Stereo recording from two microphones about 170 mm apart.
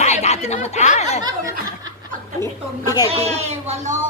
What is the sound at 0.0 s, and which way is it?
Snicker, 40° left (ahead or behind).